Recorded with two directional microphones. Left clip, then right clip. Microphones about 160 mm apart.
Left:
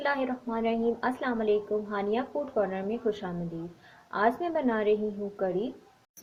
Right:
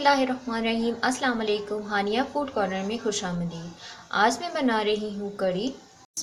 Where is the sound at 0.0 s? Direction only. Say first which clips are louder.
Right 7 dB; 45° left (ahead or behind).